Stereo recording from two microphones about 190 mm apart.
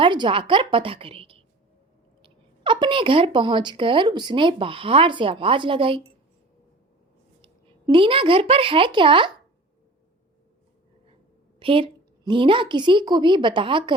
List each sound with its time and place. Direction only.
0.0 s a woman's voice: 25° right (ahead or behind)
7.4 s a woman's voice: 25° right (ahead or behind)
11.6 s a woman's voice: 25° right (ahead or behind)